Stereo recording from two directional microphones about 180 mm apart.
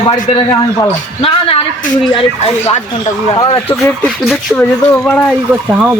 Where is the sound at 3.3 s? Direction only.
25° left (ahead or behind).